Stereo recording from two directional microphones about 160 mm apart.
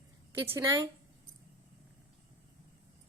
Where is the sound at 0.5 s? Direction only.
15° right (ahead or behind).